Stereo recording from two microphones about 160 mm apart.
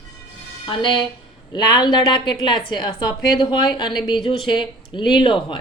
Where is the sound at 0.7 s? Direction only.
30° left (ahead or behind).